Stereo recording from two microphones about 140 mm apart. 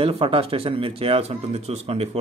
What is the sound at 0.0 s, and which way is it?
Speech, 40° right (ahead or behind).